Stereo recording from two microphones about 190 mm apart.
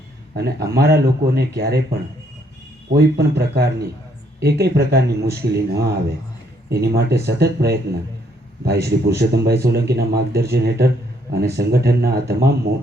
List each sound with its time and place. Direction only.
0.3 s a man's voice: 55° right (ahead or behind)